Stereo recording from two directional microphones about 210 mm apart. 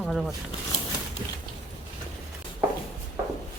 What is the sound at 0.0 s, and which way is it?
Speech, centre (ahead or behind).